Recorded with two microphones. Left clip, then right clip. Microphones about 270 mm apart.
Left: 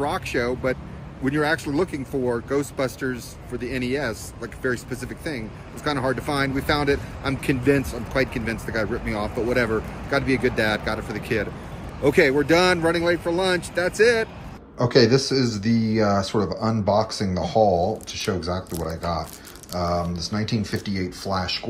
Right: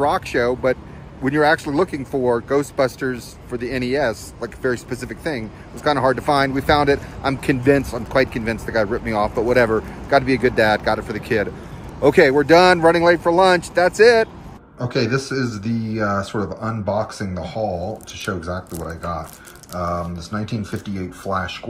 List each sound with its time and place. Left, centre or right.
0.0 s speech: centre
14.8 s speech: centre